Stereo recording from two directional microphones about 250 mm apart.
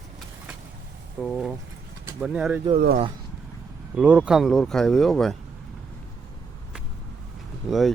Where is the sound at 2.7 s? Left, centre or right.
Right.